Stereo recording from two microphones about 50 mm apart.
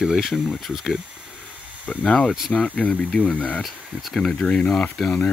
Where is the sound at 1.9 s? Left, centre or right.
Left.